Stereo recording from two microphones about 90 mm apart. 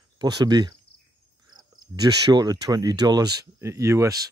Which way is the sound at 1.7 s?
50° right (ahead or behind).